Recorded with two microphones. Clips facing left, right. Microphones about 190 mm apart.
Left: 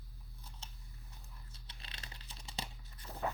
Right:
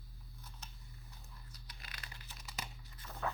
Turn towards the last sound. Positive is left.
turn(degrees=30)  # may be behind; listen again after turning